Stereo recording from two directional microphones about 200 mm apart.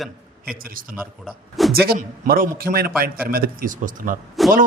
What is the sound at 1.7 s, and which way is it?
A man's voice, 50° right (ahead or behind).